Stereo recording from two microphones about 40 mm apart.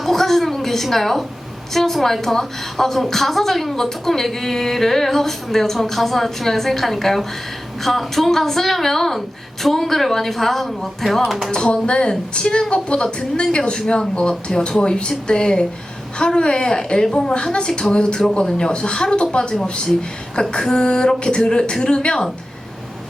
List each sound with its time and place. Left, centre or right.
0.0 s a sound: centre
1.7 s a woman's voice: centre
11.5 s a woman's voice: left